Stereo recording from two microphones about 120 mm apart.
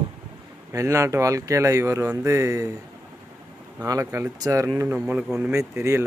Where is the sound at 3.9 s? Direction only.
25° right (ahead or behind).